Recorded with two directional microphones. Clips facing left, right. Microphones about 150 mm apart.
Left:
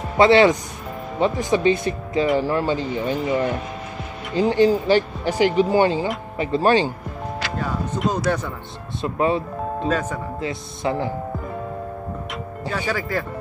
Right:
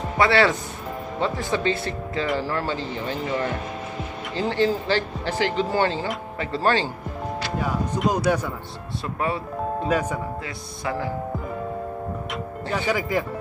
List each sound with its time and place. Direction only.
0.2 s speech: 20° left (ahead or behind)
7.5 s speech: 10° right (ahead or behind)
9.0 s speech: 20° left (ahead or behind)
9.8 s speech: 10° right (ahead or behind)
10.4 s speech: 20° left (ahead or behind)
12.7 s speech: 15° right (ahead or behind)